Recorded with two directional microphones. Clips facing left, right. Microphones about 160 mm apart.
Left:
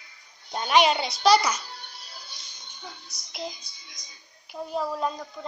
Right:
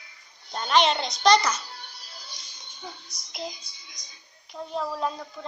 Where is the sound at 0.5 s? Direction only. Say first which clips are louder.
Left 1 dB; 10° left (ahead or behind).